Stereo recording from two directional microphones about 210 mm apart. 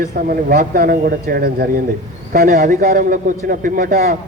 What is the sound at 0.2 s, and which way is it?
A man's voice, 45° right (ahead or behind).